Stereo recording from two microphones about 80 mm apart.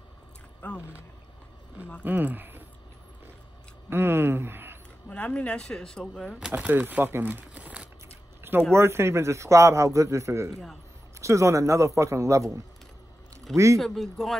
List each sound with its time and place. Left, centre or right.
0.6 s speech: centre
2.0 s speech: right
3.9 s speech: right
5.1 s speech: centre
6.5 s speech: right
8.1 s a sound: right
8.7 s a man's voice: right
10.5 s speech: centre
11.1 s a man's voice: right
13.7 s speech: centre